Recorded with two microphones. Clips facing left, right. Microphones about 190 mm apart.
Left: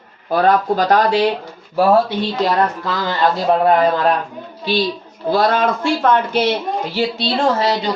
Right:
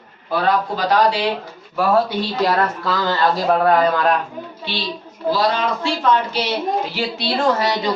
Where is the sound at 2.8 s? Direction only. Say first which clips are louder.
Left 1 dB; 20° left (ahead or behind).